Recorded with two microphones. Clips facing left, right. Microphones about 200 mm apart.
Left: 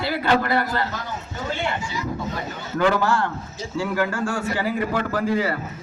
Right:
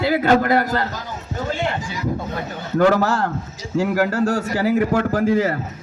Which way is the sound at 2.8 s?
40° right (ahead or behind).